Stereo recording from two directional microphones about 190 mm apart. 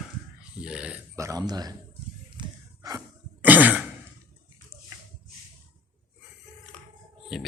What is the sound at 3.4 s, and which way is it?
Throat clearing, 10° right (ahead or behind).